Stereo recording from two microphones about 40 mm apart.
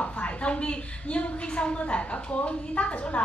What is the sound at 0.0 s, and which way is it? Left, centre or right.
A woman's voice, left.